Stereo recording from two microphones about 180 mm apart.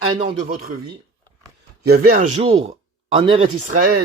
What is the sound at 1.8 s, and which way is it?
Speech, 55° right (ahead or behind).